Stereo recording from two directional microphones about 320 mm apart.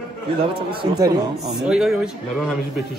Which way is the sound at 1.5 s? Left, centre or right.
Centre.